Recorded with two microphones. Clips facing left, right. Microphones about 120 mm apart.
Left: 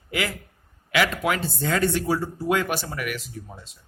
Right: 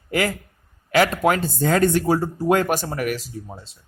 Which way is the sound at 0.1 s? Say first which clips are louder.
Right 6 dB; 45° right (ahead or behind).